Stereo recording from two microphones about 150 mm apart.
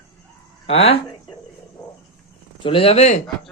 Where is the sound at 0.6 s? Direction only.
40° left (ahead or behind).